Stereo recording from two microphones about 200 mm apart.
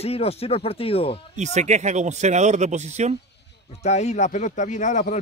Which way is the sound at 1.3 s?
35° right (ahead or behind).